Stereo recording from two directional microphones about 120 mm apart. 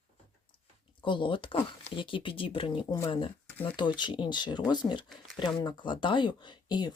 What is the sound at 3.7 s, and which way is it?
Speech, 40° left (ahead or behind).